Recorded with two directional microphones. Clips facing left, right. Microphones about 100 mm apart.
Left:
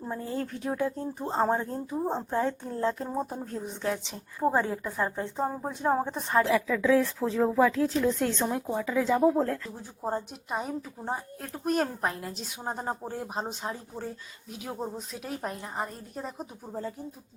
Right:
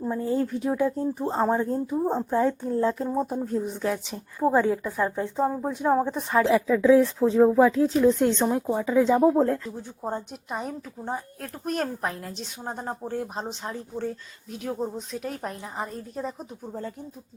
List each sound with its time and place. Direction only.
0.3 s a woman's voice: 15° right (ahead or behind)
1.4 s a woman's voice: centre (ahead or behind)
4.4 s a woman's voice: centre (ahead or behind)
6.4 s speech: 25° right (ahead or behind)
9.6 s a woman's voice: centre (ahead or behind)